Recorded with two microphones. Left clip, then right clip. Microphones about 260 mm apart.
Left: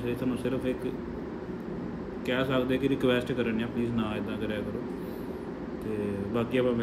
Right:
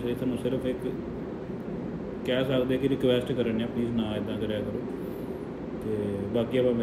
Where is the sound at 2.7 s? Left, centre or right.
Centre.